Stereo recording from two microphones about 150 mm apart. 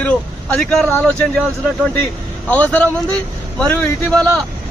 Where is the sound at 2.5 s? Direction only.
10° left (ahead or behind).